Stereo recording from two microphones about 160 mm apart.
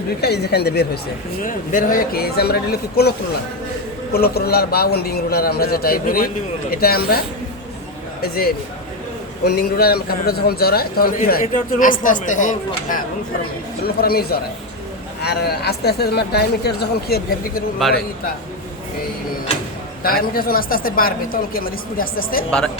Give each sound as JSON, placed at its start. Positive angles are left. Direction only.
{"t": 0.2, "sound": "speech", "side_deg": 90}
{"t": 1.4, "sound": "a man's voice", "side_deg": 55}
{"t": 8.2, "sound": "a man's voice", "side_deg": 70}
{"t": 9.4, "sound": "a man's voice", "side_deg": 80}
{"t": 13.8, "sound": "a man's voice", "side_deg": 70}
{"t": 15.2, "sound": "speech", "side_deg": 85}
{"t": 17.8, "sound": "a man's voice", "side_deg": 0}
{"t": 20.0, "sound": "a woman's voice", "side_deg": 65}